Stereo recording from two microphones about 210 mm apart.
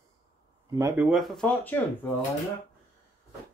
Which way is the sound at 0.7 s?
10° right (ahead or behind).